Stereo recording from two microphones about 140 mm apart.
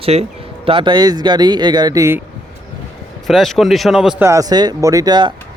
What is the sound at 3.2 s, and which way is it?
Speech, centre (ahead or behind).